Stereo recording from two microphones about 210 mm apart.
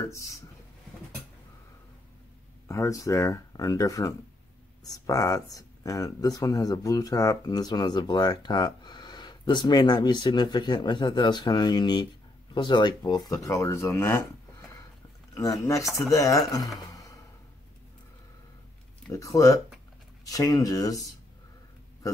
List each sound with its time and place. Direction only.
0.1 s speech: 15° left (ahead or behind)
2.7 s speech: 15° left (ahead or behind)
15.6 s speech: 15° left (ahead or behind)
19.1 s speech: 15° left (ahead or behind)